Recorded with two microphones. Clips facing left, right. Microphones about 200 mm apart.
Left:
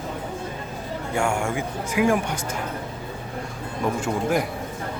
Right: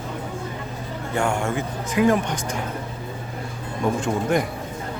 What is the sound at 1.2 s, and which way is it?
Speech, 10° left (ahead or behind).